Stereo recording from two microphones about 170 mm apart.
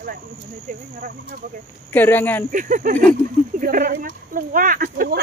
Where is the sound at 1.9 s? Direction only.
10° left (ahead or behind).